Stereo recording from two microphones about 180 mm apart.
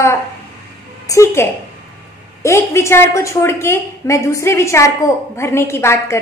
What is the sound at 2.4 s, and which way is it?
A woman's voice, 15° left (ahead or behind).